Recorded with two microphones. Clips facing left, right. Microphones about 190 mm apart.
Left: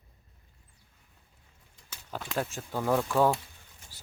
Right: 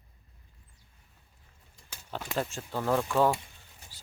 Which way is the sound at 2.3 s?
Centre (ahead or behind).